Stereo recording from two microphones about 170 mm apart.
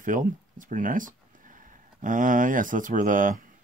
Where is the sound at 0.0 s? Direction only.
50° right (ahead or behind).